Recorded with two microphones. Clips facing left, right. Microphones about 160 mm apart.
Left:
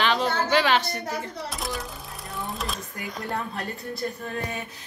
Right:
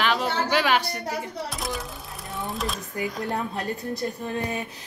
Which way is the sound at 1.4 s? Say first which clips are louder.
Right 1 dB; centre (ahead or behind).